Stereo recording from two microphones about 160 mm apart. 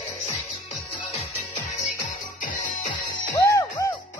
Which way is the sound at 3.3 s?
20° left (ahead or behind).